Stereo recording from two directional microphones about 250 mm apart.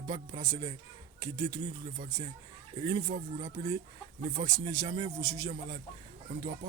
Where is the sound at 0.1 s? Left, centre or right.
Centre.